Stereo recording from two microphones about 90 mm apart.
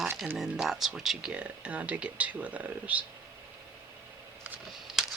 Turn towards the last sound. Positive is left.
turn(degrees=-5)  # may be behind; listen again after turning